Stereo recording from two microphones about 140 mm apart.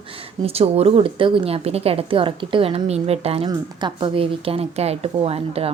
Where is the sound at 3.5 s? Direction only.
35° right (ahead or behind).